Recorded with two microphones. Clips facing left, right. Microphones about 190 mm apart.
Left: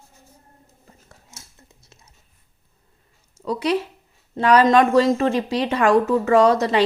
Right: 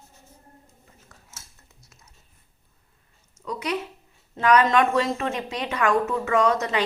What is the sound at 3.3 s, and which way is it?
Speech, 35° left (ahead or behind).